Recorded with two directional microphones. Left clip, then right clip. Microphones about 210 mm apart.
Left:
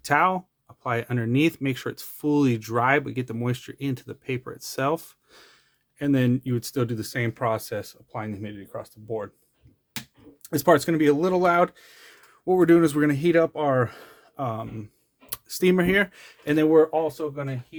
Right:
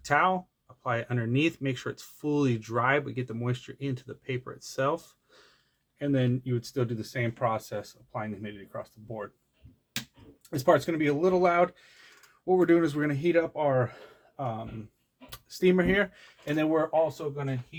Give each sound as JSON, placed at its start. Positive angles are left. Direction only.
{"t": 0.0, "sound": "speech", "side_deg": 35}
{"t": 10.4, "sound": "speech", "side_deg": 55}